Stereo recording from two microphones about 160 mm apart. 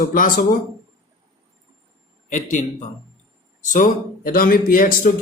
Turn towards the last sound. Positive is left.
turn(degrees=60)  # may be behind; listen again after turning